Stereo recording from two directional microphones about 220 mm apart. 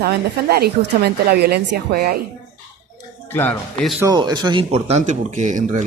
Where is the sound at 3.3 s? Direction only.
10° left (ahead or behind).